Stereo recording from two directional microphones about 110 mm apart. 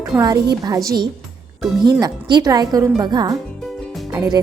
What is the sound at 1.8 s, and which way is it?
Speech, 40° right (ahead or behind).